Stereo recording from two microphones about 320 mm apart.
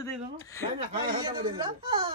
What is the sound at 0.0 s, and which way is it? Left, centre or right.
Speech, centre.